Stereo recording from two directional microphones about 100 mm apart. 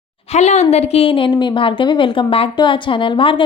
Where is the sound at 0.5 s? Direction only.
90° left.